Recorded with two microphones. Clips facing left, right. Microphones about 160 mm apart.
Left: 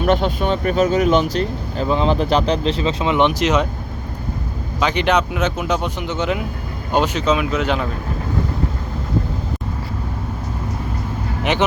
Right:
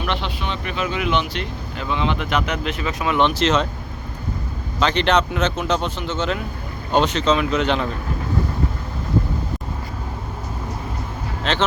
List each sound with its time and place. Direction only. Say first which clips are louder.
0.0 s speech: left 8 dB; 45° left (ahead or behind); by 3.7 s 15° left (ahead or behind)
4.8 s speech: left 1 dB; 10° left (ahead or behind)
11.5 s speech: left 3 dB; 15° left (ahead or behind)